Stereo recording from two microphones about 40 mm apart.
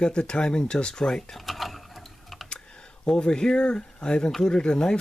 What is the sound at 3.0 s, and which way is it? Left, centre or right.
Speech, centre.